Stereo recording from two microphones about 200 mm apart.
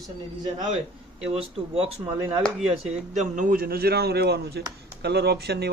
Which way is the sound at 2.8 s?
35° right (ahead or behind).